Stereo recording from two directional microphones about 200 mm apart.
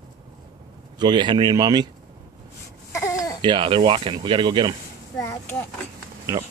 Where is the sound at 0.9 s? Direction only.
20° right (ahead or behind).